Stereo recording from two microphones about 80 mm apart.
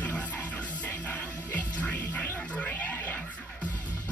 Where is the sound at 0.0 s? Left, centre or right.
Left.